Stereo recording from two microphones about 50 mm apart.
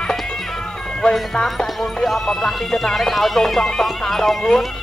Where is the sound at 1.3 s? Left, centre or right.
Centre.